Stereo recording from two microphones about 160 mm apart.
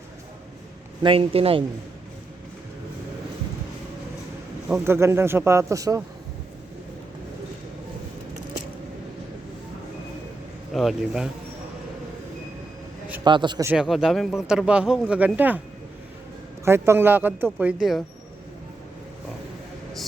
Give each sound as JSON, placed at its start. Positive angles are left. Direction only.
{"t": 1.0, "sound": "speech", "side_deg": -35}
{"t": 4.7, "sound": "speech", "side_deg": -15}
{"t": 10.7, "sound": "speech", "side_deg": 0}
{"t": 13.2, "sound": "speech", "side_deg": -30}
{"t": 13.7, "sound": "speech", "side_deg": -5}
{"t": 16.6, "sound": "speech", "side_deg": -15}